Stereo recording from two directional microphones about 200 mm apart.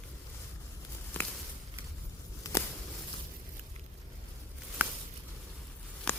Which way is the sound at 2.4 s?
15° left (ahead or behind).